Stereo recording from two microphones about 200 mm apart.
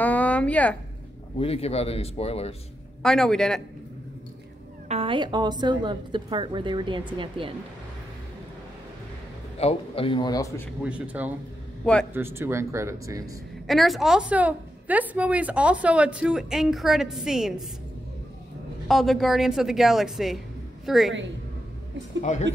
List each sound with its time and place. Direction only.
0.0 s a sound: 5° left (ahead or behind)
1.4 s speech: 30° left (ahead or behind)
3.0 s a woman's voice: 5° left (ahead or behind)
4.8 s a woman's voice: 30° right (ahead or behind)
9.6 s a man's voice: 30° left (ahead or behind); by 10.7 s 15° left (ahead or behind)
10.8 s speech: 5° right (ahead or behind)
11.8 s a man's voice: 5° left (ahead or behind)
12.1 s speech: 10° right (ahead or behind)
13.7 s a woman's voice: centre (ahead or behind)
18.9 s a woman's voice: centre (ahead or behind)
22.2 s speech: 35° left (ahead or behind)